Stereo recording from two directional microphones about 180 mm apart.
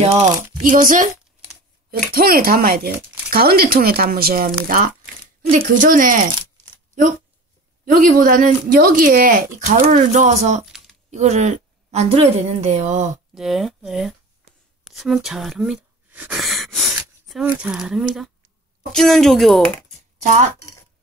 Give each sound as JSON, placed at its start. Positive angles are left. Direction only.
{"t": 0.7, "sound": "speech", "side_deg": -50}
{"t": 7.8, "sound": "speech", "side_deg": -45}
{"t": 10.6, "sound": "typing", "side_deg": 0}
{"t": 11.1, "sound": "a woman's voice", "side_deg": -40}
{"t": 13.3, "sound": "speech", "side_deg": 0}
{"t": 20.2, "sound": "speech", "side_deg": -40}